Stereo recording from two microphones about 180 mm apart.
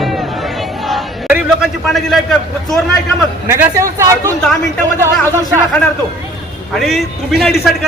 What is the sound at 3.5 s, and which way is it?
Speech, 15° right (ahead or behind).